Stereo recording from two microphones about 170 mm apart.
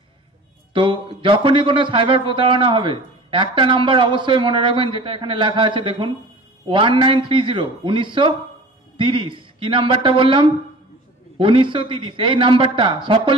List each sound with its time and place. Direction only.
0.7 s a man's voice: 30° right (ahead or behind)